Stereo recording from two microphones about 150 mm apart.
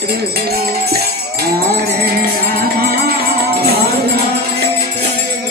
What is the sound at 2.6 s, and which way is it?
Music, 85° right.